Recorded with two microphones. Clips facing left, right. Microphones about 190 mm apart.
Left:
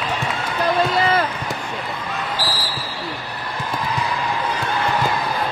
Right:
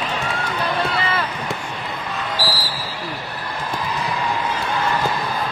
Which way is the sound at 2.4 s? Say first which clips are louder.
Right 3 dB; 10° right (ahead or behind).